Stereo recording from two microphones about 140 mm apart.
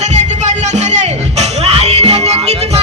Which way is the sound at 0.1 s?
55° right (ahead or behind).